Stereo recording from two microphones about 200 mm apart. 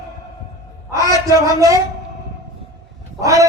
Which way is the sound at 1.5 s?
15° right (ahead or behind).